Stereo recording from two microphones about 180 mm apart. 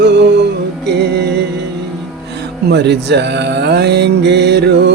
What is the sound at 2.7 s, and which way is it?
Speech, 70° right (ahead or behind).